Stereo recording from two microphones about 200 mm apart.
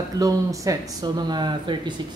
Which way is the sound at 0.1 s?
15° right (ahead or behind).